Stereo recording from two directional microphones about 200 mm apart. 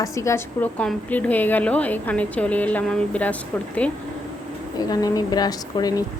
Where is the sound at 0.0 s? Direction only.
15° left (ahead or behind).